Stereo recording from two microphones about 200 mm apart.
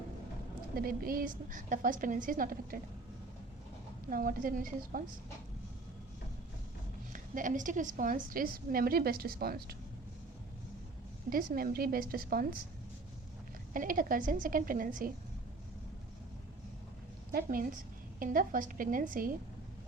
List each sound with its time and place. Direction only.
0.8 s a woman's voice: 45° right (ahead or behind)
4.1 s a woman's voice: 45° right (ahead or behind)
7.1 s a woman's voice: 40° right (ahead or behind)
11.3 s a woman's voice: 45° right (ahead or behind)
13.7 s a woman's voice: 40° right (ahead or behind)
17.3 s a woman's voice: 45° right (ahead or behind)